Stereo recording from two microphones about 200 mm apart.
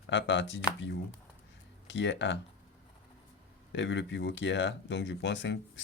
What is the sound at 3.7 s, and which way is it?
Speech, 65° left (ahead or behind).